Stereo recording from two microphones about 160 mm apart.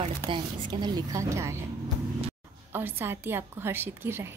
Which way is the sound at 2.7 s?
15° right (ahead or behind).